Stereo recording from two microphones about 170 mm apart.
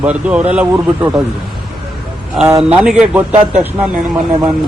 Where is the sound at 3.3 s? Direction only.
40° right (ahead or behind).